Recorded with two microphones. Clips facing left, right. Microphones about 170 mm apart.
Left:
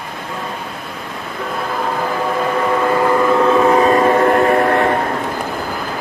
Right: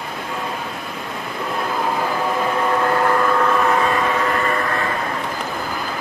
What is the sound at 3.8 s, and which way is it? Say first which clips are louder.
Train: left 8 dB; 40° left (ahead or behind).